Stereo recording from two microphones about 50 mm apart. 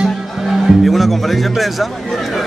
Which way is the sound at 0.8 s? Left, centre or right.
Centre.